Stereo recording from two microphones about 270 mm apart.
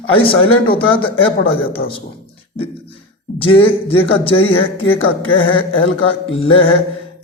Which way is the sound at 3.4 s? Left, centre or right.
Centre.